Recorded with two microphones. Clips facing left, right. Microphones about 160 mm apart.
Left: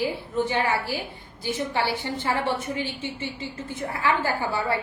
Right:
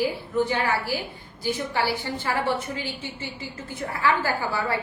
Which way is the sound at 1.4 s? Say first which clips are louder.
Even; 20° left (ahead or behind).